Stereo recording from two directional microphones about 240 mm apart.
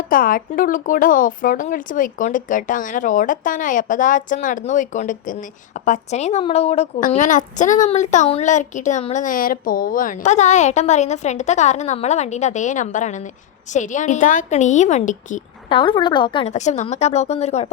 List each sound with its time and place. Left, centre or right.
0.1 s speech: left
15.7 s a woman's voice: centre